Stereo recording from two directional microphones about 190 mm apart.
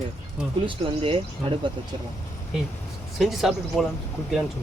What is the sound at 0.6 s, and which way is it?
Speech, 30° right (ahead or behind).